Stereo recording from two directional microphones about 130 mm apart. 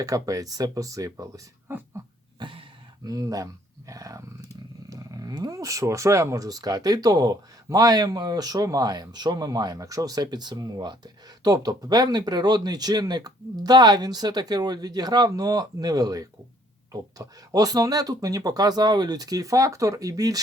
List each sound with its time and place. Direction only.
0.0 s speech: 25° right (ahead or behind)
2.4 s a sound: 40° right (ahead or behind)
3.0 s speech: 30° right (ahead or behind)